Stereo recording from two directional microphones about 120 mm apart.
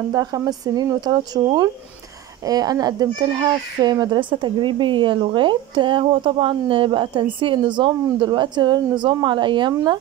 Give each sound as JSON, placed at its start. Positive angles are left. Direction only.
{"t": 0.1, "sound": "a child's voice", "side_deg": -30}